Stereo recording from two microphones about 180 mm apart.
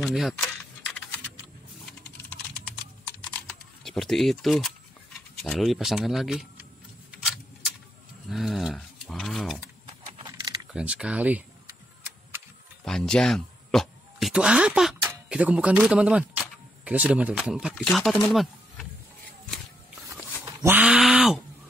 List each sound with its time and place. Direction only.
0.0 s speech: centre (ahead or behind)
3.1 s typing: 5° left (ahead or behind)
5.3 s speech: centre (ahead or behind)
7.1 s tick-tock: centre (ahead or behind)
8.3 s speech: centre (ahead or behind)
10.2 s a sound: 20° right (ahead or behind)
10.7 s speech: 5° right (ahead or behind)
12.8 s speech: 5° left (ahead or behind)
18.3 s a sound: centre (ahead or behind)
20.6 s a sound: 10° right (ahead or behind)